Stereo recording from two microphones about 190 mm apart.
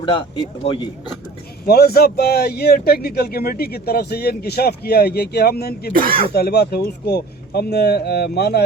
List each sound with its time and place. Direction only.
0.0 s speech: 25° left (ahead or behind)
1.6 s a man's voice: 55° left (ahead or behind)
5.9 s speech: 50° right (ahead or behind)
6.3 s a man's voice: 55° left (ahead or behind)